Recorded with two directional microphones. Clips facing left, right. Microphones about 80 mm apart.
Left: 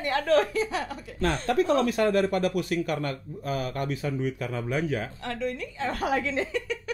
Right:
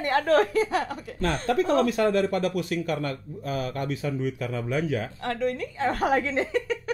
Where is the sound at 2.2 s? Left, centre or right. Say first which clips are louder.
Even; left.